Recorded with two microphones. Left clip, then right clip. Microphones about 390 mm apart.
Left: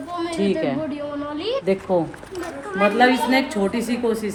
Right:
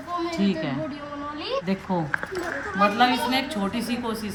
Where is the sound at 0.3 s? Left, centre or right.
Centre.